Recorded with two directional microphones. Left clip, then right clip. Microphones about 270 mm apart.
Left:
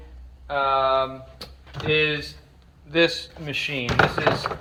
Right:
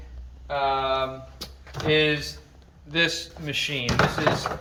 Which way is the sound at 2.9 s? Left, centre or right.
Centre.